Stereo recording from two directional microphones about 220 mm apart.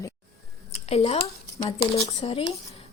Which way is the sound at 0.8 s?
30° left (ahead or behind).